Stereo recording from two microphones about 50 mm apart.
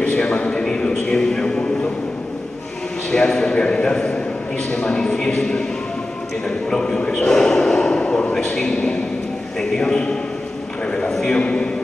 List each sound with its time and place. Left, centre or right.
0.1 s a sound: left
3.1 s a man's voice: centre
6.7 s a man's voice: centre
8.5 s a man's voice: centre
10.9 s a sound: centre
11.1 s a man's voice: centre